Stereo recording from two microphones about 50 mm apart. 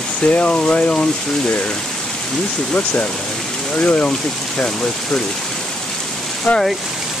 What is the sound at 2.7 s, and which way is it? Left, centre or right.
Speech, left.